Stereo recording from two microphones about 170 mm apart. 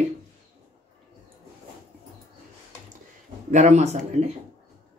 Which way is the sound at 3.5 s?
45° right (ahead or behind).